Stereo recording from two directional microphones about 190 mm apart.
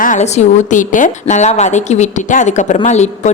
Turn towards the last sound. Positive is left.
turn(degrees=35)  # may be behind; listen again after turning